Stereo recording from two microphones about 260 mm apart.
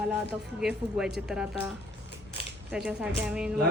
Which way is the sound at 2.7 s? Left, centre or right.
Centre.